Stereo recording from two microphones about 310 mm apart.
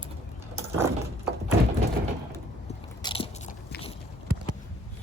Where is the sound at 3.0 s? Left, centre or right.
Centre.